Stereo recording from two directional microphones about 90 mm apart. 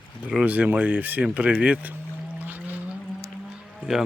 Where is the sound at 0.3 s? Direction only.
15° right (ahead or behind).